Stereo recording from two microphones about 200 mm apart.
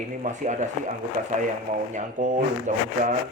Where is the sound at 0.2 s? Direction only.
40° right (ahead or behind).